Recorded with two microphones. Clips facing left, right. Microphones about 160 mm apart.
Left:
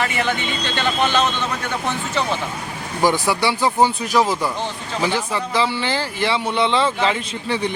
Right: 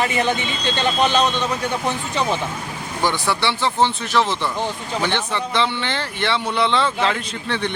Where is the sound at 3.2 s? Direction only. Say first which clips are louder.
Left 2 dB; 10° left (ahead or behind).